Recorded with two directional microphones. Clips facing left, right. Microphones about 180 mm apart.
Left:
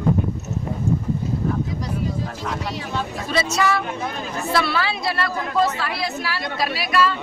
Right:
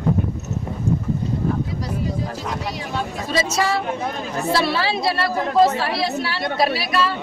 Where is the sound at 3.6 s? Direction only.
30° right (ahead or behind).